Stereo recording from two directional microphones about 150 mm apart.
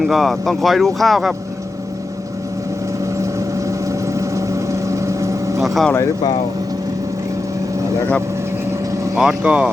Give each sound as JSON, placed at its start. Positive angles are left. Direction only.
{"t": 0.0, "sound": "speech", "side_deg": 0}
{"t": 3.7, "sound": "vehicle", "side_deg": -20}
{"t": 5.6, "sound": "speech", "side_deg": 0}
{"t": 5.9, "sound": "speech", "side_deg": 20}
{"t": 9.1, "sound": "speech", "side_deg": -5}